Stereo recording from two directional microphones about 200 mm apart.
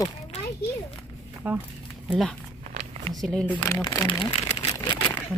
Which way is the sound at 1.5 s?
10° right (ahead or behind).